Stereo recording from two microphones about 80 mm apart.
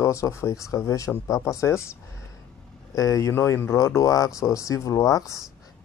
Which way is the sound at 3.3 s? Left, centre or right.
Left.